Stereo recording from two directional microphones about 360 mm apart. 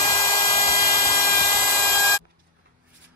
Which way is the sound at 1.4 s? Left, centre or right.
Left.